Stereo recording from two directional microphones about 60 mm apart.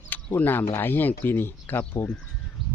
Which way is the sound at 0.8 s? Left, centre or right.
Left.